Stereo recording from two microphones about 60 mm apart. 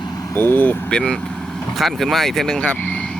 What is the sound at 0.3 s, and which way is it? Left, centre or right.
Speech, left.